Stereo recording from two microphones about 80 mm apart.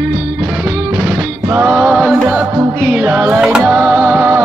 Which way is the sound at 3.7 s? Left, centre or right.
Centre.